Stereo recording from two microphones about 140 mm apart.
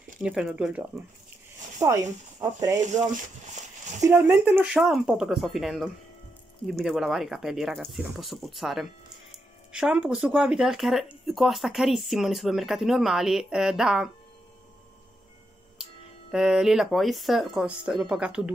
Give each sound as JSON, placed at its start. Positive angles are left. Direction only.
{"t": 0.2, "sound": "speech", "side_deg": -5}
{"t": 1.8, "sound": "speech", "side_deg": -20}
{"t": 2.8, "sound": "speech", "side_deg": -60}
{"t": 4.0, "sound": "speech", "side_deg": -15}
{"t": 4.7, "sound": "speech", "side_deg": -5}
{"t": 16.3, "sound": "speech", "side_deg": -5}